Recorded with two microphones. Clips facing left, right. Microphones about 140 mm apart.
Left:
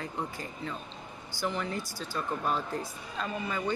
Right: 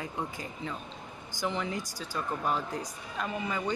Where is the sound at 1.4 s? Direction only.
20° right (ahead or behind).